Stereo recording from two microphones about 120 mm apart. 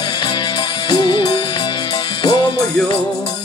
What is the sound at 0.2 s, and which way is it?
Music, 40° left (ahead or behind).